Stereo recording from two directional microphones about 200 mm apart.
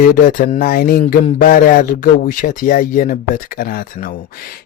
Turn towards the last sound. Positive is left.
turn(degrees=45)  # may be behind; listen again after turning